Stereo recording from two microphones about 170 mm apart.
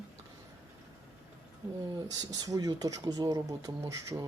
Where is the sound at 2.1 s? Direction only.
25° right (ahead or behind).